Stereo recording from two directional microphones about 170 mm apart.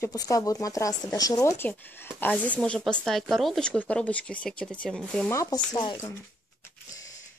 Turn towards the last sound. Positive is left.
turn(degrees=20)  # may be behind; listen again after turning